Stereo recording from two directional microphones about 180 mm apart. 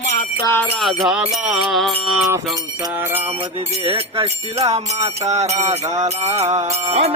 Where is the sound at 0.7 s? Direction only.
Centre (ahead or behind).